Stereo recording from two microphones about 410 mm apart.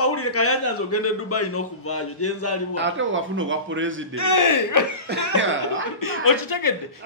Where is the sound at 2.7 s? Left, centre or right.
Right.